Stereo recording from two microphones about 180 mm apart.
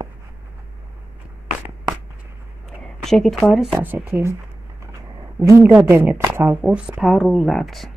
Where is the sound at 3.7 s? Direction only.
10° right (ahead or behind).